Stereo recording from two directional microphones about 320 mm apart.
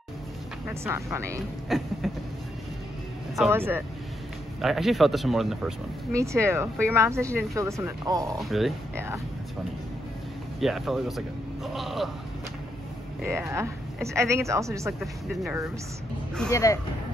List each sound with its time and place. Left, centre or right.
0.7 s speech: centre
3.3 s speech: centre
10.6 s speech: centre
13.2 s speech: centre
16.3 s speech: centre